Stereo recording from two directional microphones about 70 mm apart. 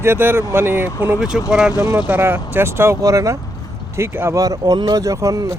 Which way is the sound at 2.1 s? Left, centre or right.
Right.